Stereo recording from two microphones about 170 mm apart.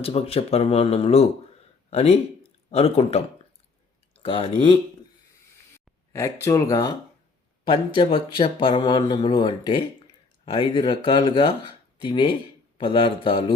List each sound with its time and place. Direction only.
0.0 s speech: 35° left (ahead or behind)
4.1 s a sound: 30° left (ahead or behind)
5.7 s speech: 15° left (ahead or behind)
7.9 s speech: 30° left (ahead or behind)